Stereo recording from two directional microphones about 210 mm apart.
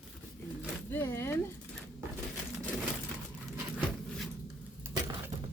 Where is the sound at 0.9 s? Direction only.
10° left (ahead or behind).